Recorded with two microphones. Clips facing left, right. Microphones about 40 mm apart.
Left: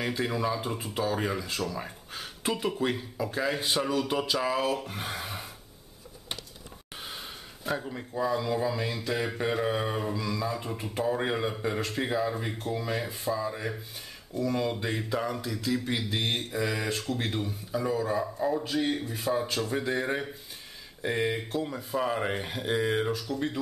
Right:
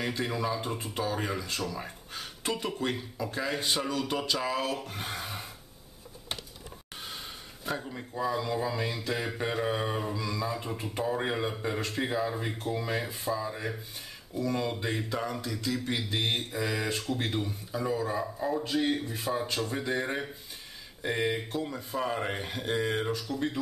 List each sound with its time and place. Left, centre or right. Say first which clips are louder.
0.0 s speech: left 2 dB; centre
7.0 s speech: left 1 dB; centre